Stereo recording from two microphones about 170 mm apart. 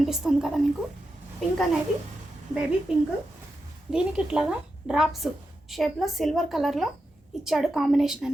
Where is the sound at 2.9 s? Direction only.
5° right (ahead or behind).